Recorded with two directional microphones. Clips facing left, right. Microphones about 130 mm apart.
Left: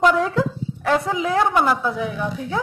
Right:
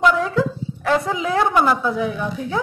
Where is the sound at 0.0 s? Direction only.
45° left (ahead or behind).